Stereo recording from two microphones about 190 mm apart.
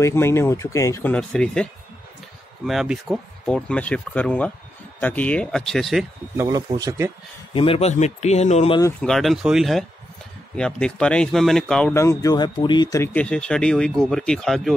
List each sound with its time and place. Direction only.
0.0 s speech: 15° left (ahead or behind)
6.3 s speech: 20° right (ahead or behind)
7.5 s speech: 30° left (ahead or behind)
9.0 s speech: centre (ahead or behind)